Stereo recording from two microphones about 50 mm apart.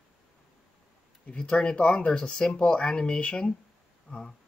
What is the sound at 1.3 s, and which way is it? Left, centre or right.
Speech, centre.